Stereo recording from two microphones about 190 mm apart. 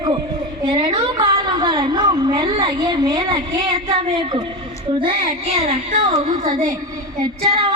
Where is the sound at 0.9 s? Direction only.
25° right (ahead or behind).